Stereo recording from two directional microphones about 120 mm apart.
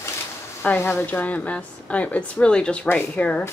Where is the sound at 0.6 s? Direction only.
15° left (ahead or behind).